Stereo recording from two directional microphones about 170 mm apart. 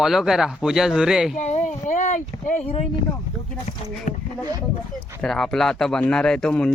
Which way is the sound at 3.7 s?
45° left (ahead or behind).